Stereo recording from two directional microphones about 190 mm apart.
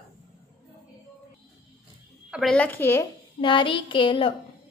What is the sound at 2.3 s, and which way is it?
Speech, 5° left (ahead or behind).